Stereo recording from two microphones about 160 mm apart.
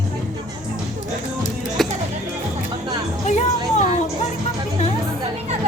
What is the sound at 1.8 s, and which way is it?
Music, centre (ahead or behind).